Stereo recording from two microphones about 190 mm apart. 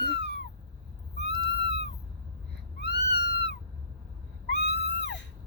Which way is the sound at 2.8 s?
60° left (ahead or behind).